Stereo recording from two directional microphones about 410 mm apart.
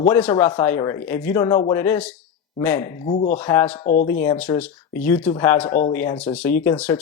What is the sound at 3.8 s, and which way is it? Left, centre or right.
Speech, centre.